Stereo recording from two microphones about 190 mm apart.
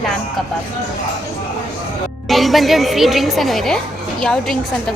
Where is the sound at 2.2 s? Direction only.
Centre (ahead or behind).